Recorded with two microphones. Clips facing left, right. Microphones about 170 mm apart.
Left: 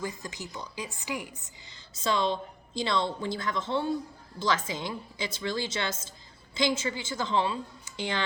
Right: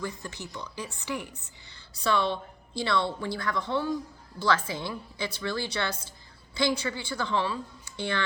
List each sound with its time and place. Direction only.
0.2 s a woman's voice: 15° left (ahead or behind)